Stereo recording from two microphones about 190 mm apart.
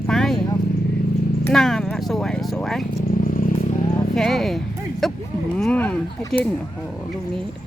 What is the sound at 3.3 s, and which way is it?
Vehicle, 45° left (ahead or behind).